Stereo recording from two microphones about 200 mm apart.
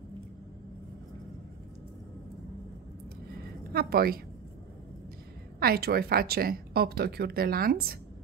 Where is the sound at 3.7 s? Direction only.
50° right (ahead or behind).